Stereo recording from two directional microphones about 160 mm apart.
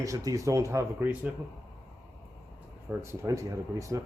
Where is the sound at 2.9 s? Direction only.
15° right (ahead or behind).